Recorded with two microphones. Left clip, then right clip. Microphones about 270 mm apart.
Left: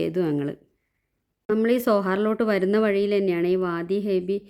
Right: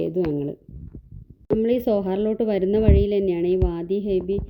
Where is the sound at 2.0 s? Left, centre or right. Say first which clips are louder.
Even; left.